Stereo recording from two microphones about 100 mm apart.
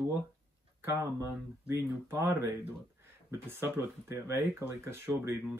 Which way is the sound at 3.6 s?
25° right (ahead or behind).